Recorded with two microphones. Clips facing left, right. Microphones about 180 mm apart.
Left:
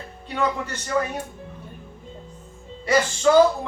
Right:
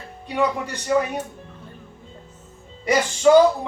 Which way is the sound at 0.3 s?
15° right (ahead or behind).